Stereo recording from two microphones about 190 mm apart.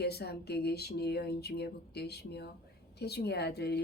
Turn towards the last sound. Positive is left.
turn(degrees=60)  # may be behind; listen again after turning